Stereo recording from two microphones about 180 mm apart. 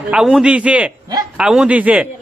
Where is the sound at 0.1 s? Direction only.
5° right (ahead or behind).